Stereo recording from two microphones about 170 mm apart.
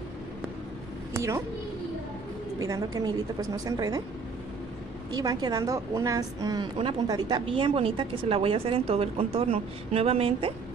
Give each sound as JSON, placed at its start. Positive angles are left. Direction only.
{"t": 1.1, "sound": "speech", "side_deg": -15}
{"t": 2.6, "sound": "a woman's voice", "side_deg": -20}
{"t": 5.1, "sound": "a woman's voice", "side_deg": -20}